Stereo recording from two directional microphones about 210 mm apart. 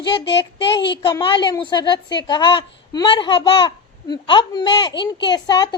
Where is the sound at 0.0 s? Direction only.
20° left (ahead or behind).